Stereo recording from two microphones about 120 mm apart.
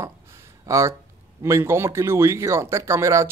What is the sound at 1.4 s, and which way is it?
Speech, 20° right (ahead or behind).